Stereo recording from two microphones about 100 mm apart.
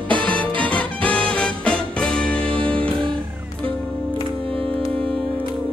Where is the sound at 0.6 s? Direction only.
15° left (ahead or behind).